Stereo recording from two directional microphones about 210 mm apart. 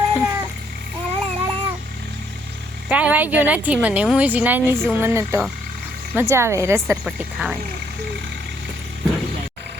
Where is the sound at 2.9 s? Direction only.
5° right (ahead or behind).